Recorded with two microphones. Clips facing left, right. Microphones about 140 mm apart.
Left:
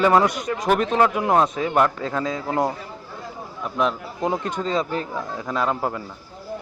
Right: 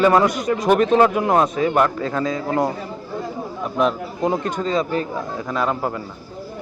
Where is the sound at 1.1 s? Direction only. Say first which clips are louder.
Right 2 dB; 10° left (ahead or behind).